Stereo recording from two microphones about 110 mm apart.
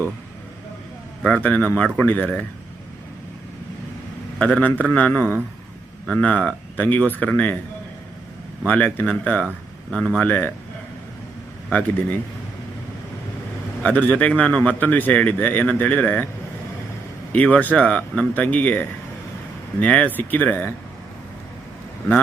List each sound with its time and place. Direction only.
1.2 s speech: 15° left (ahead or behind)
4.4 s speech: 15° left (ahead or behind)
8.6 s speech: 15° left (ahead or behind)
13.8 s speech: 15° left (ahead or behind)
17.3 s speech: 15° left (ahead or behind)